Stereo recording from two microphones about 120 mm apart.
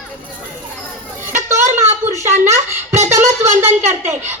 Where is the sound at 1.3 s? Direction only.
20° right (ahead or behind).